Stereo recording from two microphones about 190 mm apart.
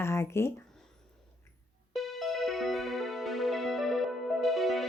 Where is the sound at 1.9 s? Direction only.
Centre (ahead or behind).